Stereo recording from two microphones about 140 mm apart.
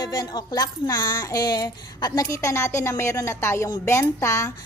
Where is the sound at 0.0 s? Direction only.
30° left (ahead or behind).